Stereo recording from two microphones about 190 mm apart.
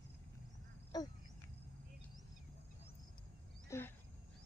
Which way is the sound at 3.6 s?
15° left (ahead or behind).